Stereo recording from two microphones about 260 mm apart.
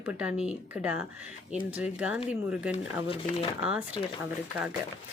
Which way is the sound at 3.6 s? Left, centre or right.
Centre.